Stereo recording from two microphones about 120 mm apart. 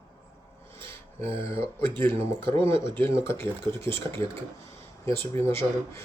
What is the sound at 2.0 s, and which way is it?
Speech, 20° left (ahead or behind).